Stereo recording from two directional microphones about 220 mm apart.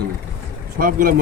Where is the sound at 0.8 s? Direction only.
40° right (ahead or behind).